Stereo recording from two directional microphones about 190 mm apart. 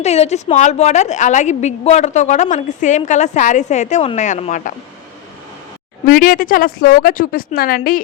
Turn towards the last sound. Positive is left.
turn(degrees=50)  # may be behind; listen again after turning